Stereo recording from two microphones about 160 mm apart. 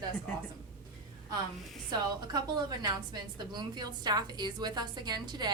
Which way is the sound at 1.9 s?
25° right (ahead or behind).